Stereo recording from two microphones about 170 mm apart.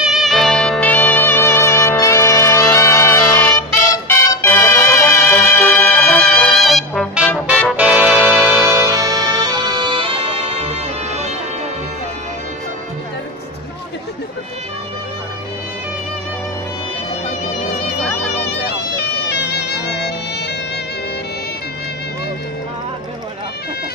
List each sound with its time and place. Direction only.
0.0 s music: centre (ahead or behind); by 11.3 s 40° right (ahead or behind)
19.2 s music: 75° left (ahead or behind)